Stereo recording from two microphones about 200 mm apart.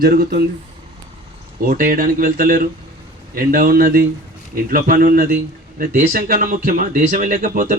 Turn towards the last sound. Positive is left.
turn(degrees=-40)  # may be behind; listen again after turning